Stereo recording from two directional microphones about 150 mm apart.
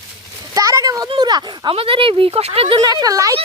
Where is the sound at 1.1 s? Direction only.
30° right (ahead or behind).